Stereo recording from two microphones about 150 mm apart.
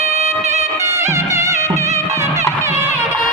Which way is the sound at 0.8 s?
20° right (ahead or behind).